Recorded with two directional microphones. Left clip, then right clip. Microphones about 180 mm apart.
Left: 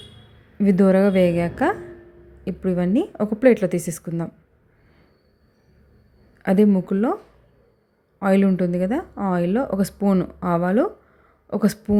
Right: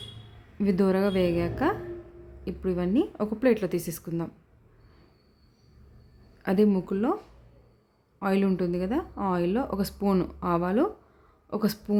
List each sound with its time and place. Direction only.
0.6 s a woman's voice: 20° left (ahead or behind)
6.4 s a woman's voice: 20° left (ahead or behind)
8.2 s speech: 20° left (ahead or behind)